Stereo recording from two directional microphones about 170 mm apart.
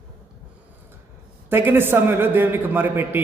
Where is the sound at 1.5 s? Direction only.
15° right (ahead or behind).